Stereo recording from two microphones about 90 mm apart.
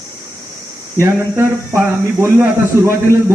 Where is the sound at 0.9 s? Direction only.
30° right (ahead or behind).